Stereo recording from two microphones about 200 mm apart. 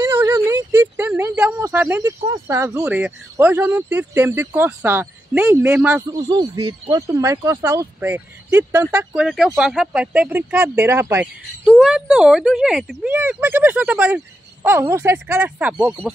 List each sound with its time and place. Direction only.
0.0 s a sound: 10° right (ahead or behind)
2.8 s speech: 10° right (ahead or behind)
6.1 s speech: 20° right (ahead or behind)